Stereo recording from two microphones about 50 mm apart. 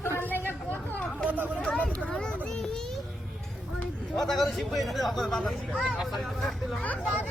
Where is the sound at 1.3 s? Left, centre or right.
Right.